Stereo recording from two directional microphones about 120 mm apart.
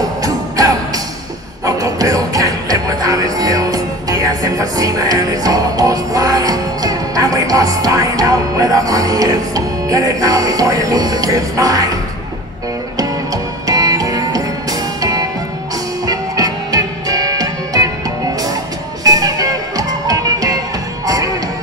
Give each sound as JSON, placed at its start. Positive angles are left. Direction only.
{"t": 0.2, "sound": "music", "side_deg": -30}
{"t": 13.7, "sound": "music", "side_deg": -30}
{"t": 19.0, "sound": "music", "side_deg": -30}